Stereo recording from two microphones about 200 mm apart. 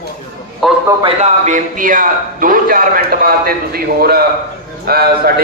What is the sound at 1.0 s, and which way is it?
A man's voice, 35° right (ahead or behind).